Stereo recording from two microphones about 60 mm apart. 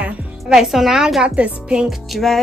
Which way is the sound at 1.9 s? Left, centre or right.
Centre.